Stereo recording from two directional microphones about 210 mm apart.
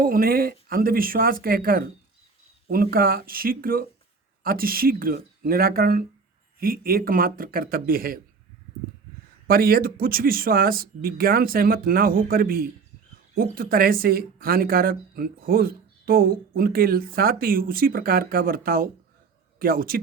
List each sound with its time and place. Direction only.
0.0 s speech: 45° right (ahead or behind)
9.5 s speech: 45° right (ahead or behind)